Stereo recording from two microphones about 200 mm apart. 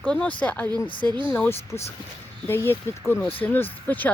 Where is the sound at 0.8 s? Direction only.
25° left (ahead or behind).